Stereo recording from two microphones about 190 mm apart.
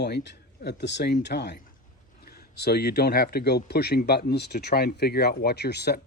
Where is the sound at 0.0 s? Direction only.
65° left (ahead or behind).